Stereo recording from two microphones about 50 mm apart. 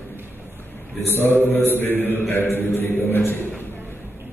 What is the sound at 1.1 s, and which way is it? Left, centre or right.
Mantra, left.